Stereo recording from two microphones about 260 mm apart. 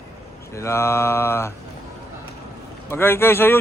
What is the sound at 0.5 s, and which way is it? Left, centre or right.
Speech, centre.